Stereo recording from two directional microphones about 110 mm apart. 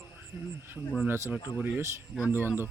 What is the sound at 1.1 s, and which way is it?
Speech, 20° right (ahead or behind).